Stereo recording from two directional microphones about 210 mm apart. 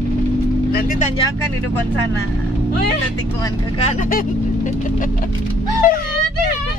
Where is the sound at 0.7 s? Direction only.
45° left (ahead or behind).